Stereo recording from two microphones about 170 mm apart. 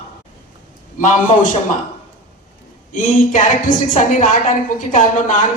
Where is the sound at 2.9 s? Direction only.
50° left (ahead or behind).